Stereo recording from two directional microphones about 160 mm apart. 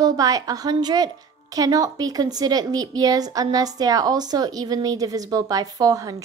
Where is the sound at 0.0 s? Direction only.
25° right (ahead or behind).